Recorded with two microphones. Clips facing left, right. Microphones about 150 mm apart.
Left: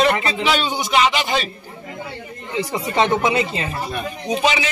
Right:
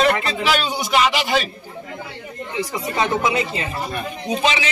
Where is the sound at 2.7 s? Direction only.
30° left (ahead or behind).